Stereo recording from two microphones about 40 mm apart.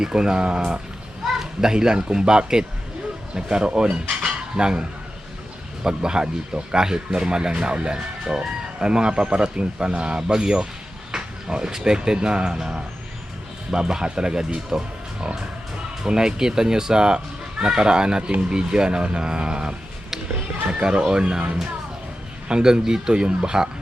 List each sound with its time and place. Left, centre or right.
0.0 s speech: centre
3.3 s cutlery: right
5.8 s speech: centre
7.9 s speech: centre
20.8 s speech: right